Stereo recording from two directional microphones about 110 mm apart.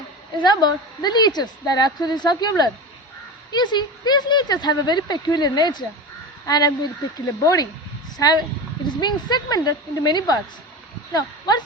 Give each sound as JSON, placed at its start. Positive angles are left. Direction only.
{"t": 0.3, "sound": "a woman's voice", "side_deg": 40}